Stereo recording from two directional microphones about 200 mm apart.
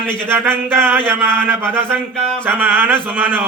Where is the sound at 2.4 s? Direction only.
10° right (ahead or behind).